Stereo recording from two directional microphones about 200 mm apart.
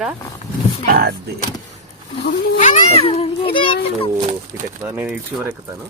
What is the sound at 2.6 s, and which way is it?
A child's voice, 40° left (ahead or behind).